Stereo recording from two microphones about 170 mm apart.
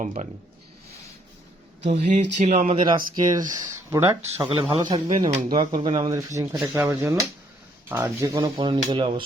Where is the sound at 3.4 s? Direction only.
20° right (ahead or behind); by 5.4 s 35° right (ahead or behind).